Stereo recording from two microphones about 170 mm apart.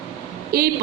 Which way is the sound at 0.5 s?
65° right (ahead or behind).